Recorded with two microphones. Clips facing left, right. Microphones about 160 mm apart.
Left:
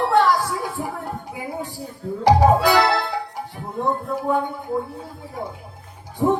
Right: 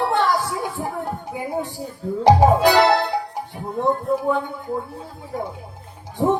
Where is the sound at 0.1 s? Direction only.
20° right (ahead or behind).